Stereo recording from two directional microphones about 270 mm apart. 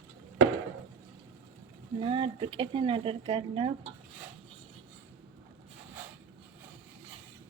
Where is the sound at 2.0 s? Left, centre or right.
Centre.